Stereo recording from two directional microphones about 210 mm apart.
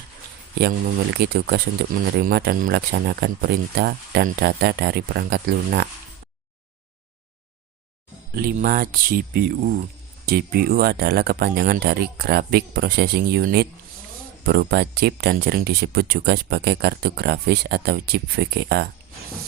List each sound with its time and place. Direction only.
1.1 s speech: 50° right (ahead or behind)
8.4 s speech: 45° right (ahead or behind)